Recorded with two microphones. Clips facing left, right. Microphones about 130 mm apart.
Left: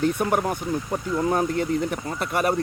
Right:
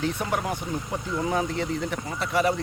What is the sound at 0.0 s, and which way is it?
Speech, 50° left (ahead or behind).